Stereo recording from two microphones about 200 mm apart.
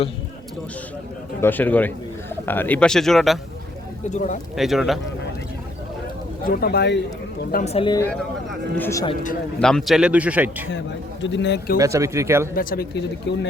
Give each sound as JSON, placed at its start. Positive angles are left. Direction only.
{"t": 1.4, "sound": "a man's voice", "side_deg": 10}
{"t": 4.1, "sound": "speech", "side_deg": 35}
{"t": 4.5, "sound": "a man's voice", "side_deg": 0}
{"t": 6.4, "sound": "speech", "side_deg": 50}
{"t": 7.5, "sound": "speech", "side_deg": 35}
{"t": 8.1, "sound": "speech", "side_deg": 5}
{"t": 8.9, "sound": "speech", "side_deg": 15}
{"t": 9.6, "sound": "a man's voice", "side_deg": 5}
{"t": 11.2, "sound": "speech", "side_deg": 65}
{"t": 11.8, "sound": "speech", "side_deg": -15}
{"t": 12.5, "sound": "speech", "side_deg": 50}